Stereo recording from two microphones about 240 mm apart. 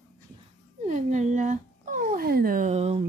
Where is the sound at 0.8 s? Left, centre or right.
Right.